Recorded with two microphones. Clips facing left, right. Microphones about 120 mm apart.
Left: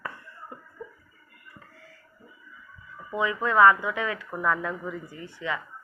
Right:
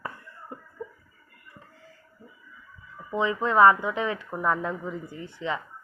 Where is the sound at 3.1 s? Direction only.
25° right (ahead or behind).